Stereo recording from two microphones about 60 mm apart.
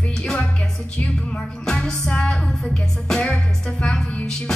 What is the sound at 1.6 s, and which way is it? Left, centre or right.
Music, centre.